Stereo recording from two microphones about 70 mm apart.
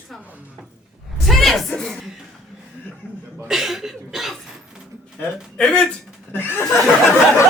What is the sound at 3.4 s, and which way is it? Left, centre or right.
Speech, centre.